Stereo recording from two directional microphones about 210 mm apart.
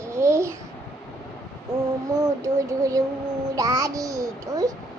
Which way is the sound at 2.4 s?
15° right (ahead or behind).